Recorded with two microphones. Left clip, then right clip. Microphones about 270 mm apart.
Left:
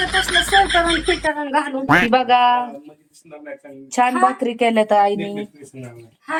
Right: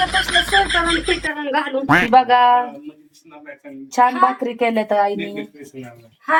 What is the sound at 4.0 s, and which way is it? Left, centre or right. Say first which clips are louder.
A woman's voice: right 1 dB; centre.